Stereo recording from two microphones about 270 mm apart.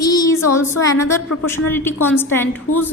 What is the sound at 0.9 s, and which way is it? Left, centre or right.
Speech, left.